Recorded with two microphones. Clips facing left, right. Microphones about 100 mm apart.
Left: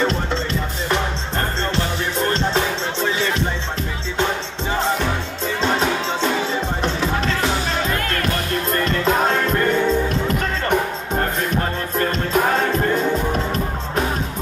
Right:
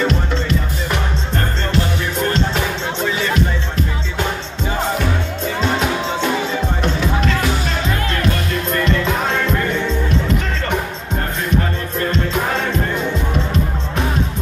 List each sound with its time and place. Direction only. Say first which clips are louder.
0.0 s music: right 1 dB; 30° left (ahead or behind)
8.8 s music: left 2 dB; 40° left (ahead or behind)
12.0 s music: right 2 dB; 45° left (ahead or behind)